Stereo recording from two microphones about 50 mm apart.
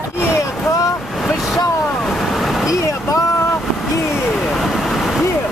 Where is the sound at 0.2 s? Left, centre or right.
Left.